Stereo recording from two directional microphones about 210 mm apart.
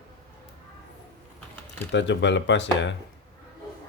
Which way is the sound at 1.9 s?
60° left (ahead or behind).